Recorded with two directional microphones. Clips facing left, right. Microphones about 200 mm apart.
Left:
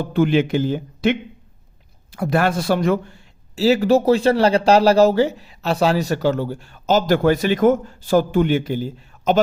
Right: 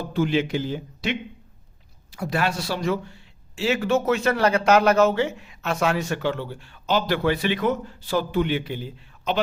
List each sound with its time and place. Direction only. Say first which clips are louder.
0.0 s speech: left 5 dB; 60° left (ahead or behind); by 9.4 s 45° left (ahead or behind)